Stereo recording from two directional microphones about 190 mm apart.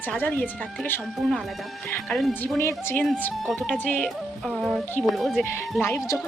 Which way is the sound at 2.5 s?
15° left (ahead or behind).